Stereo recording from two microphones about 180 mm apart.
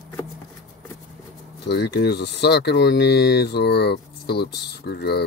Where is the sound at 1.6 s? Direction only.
70° left (ahead or behind).